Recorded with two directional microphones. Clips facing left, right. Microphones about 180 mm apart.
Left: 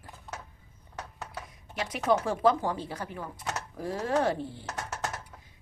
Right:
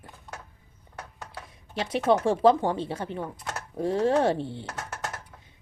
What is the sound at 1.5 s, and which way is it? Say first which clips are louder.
A woman's voice: right 7 dB; 30° right (ahead or behind).